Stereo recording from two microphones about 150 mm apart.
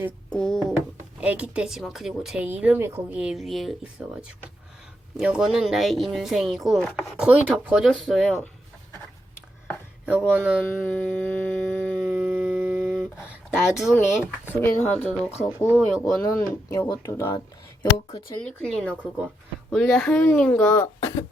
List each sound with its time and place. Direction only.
0.3 s speech: 5° left (ahead or behind)
1.2 s speech: 10° right (ahead or behind)
10.1 s speech: 10° right (ahead or behind)
10.6 s a sound: 10° left (ahead or behind)
11.9 s a sound: 5° right (ahead or behind)
14.1 s speech: 5° right (ahead or behind)
14.8 s speech: 10° left (ahead or behind)
18.4 s speech: 5° left (ahead or behind)
18.9 s speech: 10° right (ahead or behind)
19.7 s speech: centre (ahead or behind); by 21.2 s 20° left (ahead or behind)